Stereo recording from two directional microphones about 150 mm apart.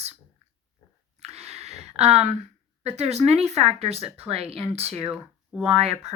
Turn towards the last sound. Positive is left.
turn(degrees=-45)  # may be behind; listen again after turning